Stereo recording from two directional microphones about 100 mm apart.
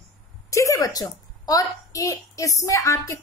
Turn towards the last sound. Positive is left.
turn(degrees=30)  # may be behind; listen again after turning